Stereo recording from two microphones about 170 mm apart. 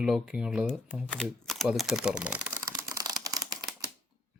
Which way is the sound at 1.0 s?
5° left (ahead or behind).